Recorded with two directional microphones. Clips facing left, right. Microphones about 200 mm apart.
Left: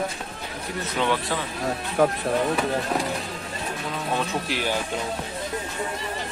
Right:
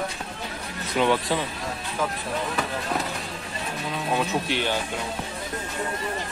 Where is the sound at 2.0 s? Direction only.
65° left (ahead or behind).